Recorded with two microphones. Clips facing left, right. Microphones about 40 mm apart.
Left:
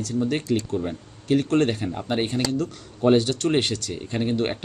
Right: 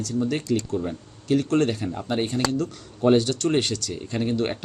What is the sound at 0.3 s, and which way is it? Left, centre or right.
Speech, left.